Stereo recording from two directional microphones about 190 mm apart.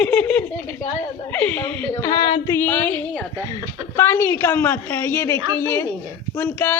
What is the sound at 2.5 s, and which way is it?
A woman's voice, 10° left (ahead or behind).